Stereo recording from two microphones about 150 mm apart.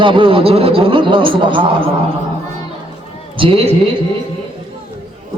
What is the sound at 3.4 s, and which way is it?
Speech, 40° right (ahead or behind).